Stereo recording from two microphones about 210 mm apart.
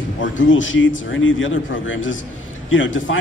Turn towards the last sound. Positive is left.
turn(degrees=65)  # may be behind; listen again after turning